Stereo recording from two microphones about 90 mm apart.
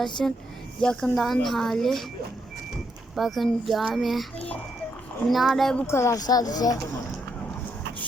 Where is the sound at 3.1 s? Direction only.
Centre (ahead or behind).